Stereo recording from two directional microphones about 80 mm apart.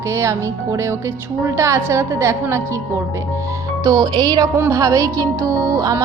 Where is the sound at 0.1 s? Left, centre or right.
Right.